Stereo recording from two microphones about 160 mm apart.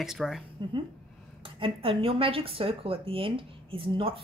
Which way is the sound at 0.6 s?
30° right (ahead or behind).